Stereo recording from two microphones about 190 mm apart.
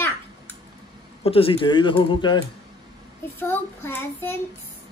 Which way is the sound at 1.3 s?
30° left (ahead or behind).